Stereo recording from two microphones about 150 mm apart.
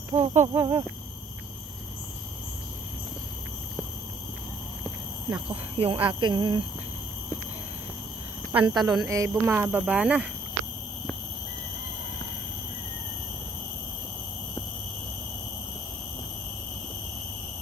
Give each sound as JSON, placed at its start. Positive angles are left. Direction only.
{"t": 0.1, "sound": "a sound", "side_deg": -45}
{"t": 0.5, "sound": "speech", "side_deg": -30}
{"t": 5.5, "sound": "speech", "side_deg": -35}
{"t": 8.5, "sound": "speech", "side_deg": -25}
{"t": 9.5, "sound": "speech", "side_deg": -10}